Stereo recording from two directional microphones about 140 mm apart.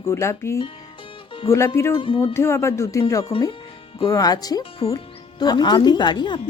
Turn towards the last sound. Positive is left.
turn(degrees=35)  # may be behind; listen again after turning